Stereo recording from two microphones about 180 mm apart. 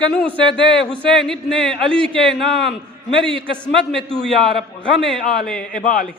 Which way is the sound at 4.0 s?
30° right (ahead or behind).